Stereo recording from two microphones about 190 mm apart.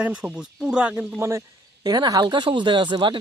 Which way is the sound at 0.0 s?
5° right (ahead or behind).